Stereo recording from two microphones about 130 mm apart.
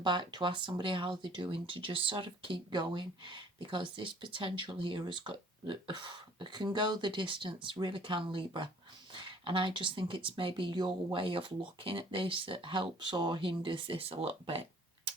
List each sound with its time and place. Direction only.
0.0 s speech: 35° right (ahead or behind)